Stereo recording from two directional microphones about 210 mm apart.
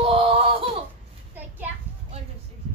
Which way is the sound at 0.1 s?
25° right (ahead or behind).